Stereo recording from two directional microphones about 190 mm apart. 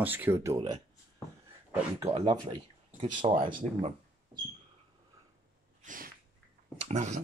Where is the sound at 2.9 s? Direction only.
35° right (ahead or behind).